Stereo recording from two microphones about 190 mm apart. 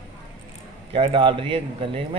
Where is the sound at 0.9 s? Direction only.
30° right (ahead or behind).